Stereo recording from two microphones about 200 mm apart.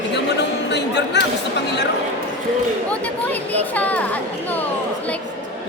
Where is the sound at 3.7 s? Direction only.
5° left (ahead or behind).